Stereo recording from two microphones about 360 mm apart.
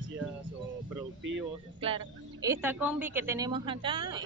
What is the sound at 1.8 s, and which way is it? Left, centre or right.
A woman's voice, centre.